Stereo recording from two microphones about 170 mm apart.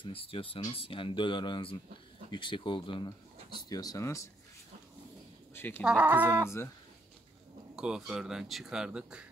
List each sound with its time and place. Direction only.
0.0 s speech: 35° left (ahead or behind); by 4.3 s 20° left (ahead or behind)
5.5 s speech: 15° left (ahead or behind)
5.9 s speech: 10° right (ahead or behind)
7.7 s speech: 5° right (ahead or behind)